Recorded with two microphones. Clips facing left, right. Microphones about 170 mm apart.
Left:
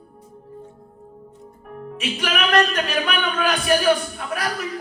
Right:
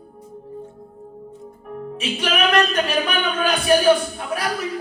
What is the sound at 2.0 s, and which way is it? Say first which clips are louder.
Speech: right 2 dB; 30° right (ahead or behind).